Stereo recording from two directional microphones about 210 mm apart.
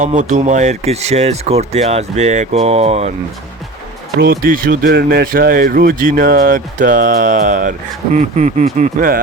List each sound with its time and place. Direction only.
0.0 s speech: 35° right (ahead or behind)
4.2 s speech: 45° right (ahead or behind)